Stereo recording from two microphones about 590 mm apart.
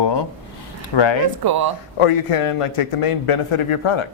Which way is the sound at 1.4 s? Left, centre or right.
Right.